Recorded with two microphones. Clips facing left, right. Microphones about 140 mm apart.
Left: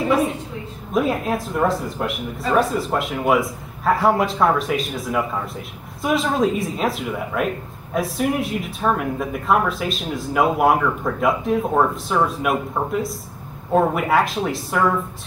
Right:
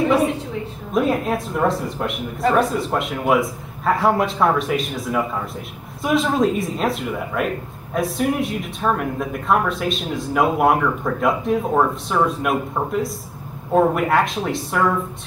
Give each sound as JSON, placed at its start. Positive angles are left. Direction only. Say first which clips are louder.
{"t": 0.9, "sound": "speech", "louder": "right 1 dB", "side_deg": 0}